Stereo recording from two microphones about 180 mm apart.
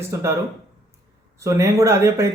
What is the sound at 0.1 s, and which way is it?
Speech, 15° right (ahead or behind).